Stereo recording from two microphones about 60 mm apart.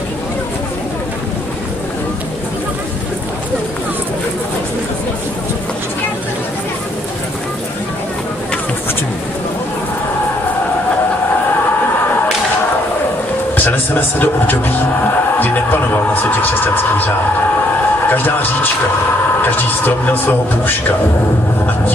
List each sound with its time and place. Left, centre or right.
13.6 s a man's voice: left
18.1 s speech: left